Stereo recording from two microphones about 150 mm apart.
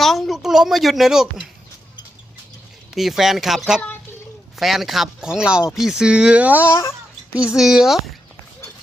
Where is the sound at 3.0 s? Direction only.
Centre (ahead or behind).